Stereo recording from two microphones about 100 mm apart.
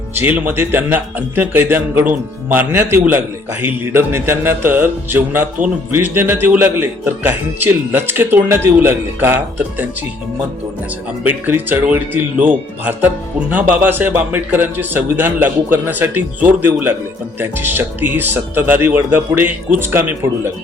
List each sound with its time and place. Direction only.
0.1 s speech: 20° right (ahead or behind)
11.2 s speech: 20° right (ahead or behind)